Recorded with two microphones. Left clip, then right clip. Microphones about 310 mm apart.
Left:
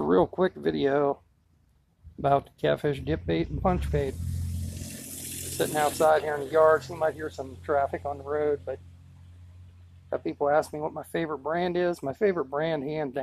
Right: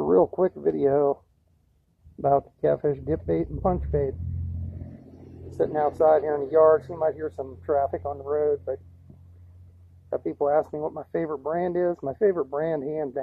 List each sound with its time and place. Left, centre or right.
0.0 s speech: left
2.2 s speech: left
5.6 s speech: left
10.0 s speech: left